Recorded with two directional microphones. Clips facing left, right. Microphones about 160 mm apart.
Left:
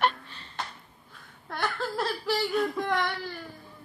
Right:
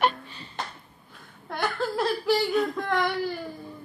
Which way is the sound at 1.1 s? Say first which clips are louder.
Right 3 dB; 5° right (ahead or behind).